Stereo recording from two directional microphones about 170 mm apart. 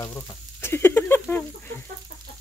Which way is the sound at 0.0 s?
15° left (ahead or behind).